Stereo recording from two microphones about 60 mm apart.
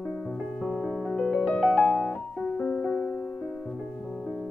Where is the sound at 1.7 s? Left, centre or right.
Centre.